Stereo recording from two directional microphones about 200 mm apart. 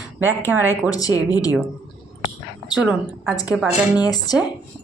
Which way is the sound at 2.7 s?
5° right (ahead or behind).